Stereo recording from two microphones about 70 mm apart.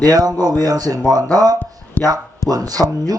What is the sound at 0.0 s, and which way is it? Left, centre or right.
Speech, right.